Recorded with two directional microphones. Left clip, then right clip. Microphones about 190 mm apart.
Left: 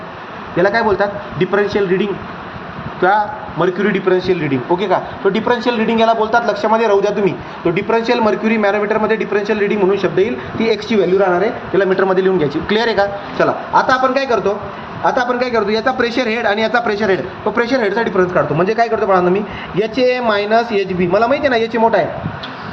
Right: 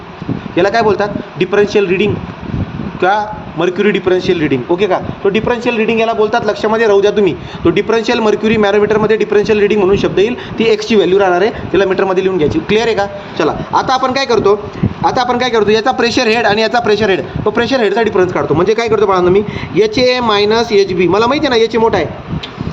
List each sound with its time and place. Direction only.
0.5 s a man's voice: 40° right (ahead or behind)
12.0 s a man's voice: 25° right (ahead or behind)
13.4 s a man's voice: 45° right (ahead or behind)
20.2 s a man's voice: 50° right (ahead or behind)